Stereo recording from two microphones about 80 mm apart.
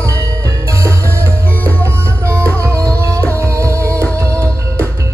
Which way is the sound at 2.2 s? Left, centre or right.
Right.